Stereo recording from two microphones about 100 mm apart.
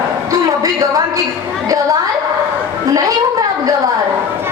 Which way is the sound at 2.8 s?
40° right (ahead or behind).